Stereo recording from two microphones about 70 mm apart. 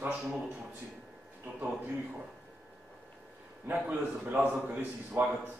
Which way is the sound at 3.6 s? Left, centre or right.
Right.